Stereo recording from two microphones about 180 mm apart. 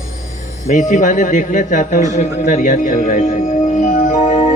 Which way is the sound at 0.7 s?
45° left (ahead or behind).